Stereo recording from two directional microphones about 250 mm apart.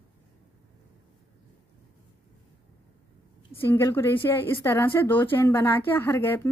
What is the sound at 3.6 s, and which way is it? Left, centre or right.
A woman's voice, centre.